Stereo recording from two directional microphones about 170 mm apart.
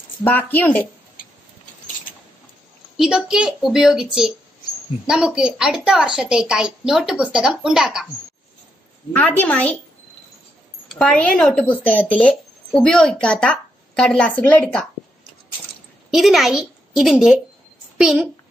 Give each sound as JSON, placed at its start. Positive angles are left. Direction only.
{"t": 0.2, "sound": "speech", "side_deg": 10}
{"t": 3.0, "sound": "a woman's voice", "side_deg": -5}
{"t": 9.1, "sound": "speech", "side_deg": 10}
{"t": 10.9, "sound": "speech", "side_deg": 5}
{"t": 16.1, "sound": "a woman's voice", "side_deg": 0}